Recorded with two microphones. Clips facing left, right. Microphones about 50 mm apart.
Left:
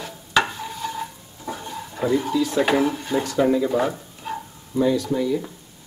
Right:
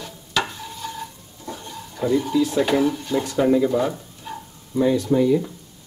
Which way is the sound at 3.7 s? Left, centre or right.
Centre.